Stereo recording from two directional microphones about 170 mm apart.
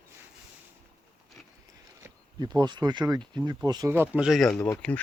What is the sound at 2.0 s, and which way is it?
Speech, 25° right (ahead or behind).